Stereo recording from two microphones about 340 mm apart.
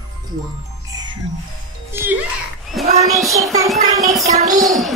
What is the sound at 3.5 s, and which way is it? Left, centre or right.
Speech, centre.